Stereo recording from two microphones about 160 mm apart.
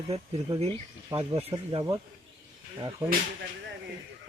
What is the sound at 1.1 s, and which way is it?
Speech, 20° right (ahead or behind).